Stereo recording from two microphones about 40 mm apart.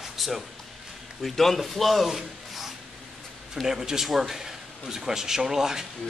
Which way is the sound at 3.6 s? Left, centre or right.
Centre.